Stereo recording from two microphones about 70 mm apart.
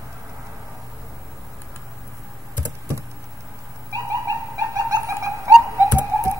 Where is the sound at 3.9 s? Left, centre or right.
Right.